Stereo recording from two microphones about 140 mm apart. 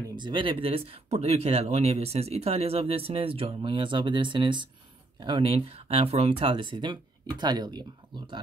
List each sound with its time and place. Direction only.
0.1 s speech: 35° right (ahead or behind)